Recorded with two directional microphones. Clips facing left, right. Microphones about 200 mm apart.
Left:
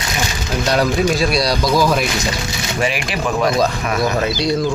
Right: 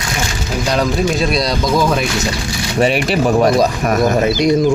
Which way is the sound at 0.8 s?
Centre (ahead or behind).